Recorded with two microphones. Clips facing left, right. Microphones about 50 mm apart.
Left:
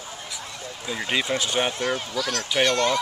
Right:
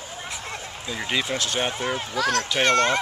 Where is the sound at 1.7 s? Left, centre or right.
Centre.